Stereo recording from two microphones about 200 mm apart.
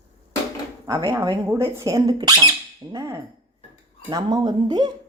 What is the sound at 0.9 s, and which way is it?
Speech, 15° right (ahead or behind).